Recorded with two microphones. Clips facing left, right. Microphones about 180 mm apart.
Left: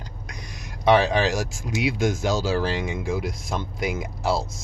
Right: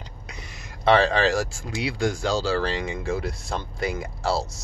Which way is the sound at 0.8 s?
15° left (ahead or behind).